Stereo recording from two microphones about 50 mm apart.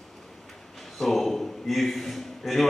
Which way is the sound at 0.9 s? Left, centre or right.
Centre.